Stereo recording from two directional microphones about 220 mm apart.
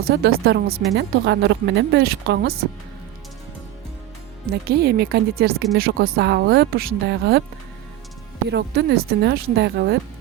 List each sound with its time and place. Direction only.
0.1 s speech: 45° right (ahead or behind)
4.4 s speech: 45° right (ahead or behind)
8.4 s speech: 50° right (ahead or behind)